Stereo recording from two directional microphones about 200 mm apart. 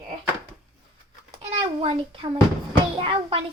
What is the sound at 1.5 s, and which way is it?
A child's voice, 35° right (ahead or behind).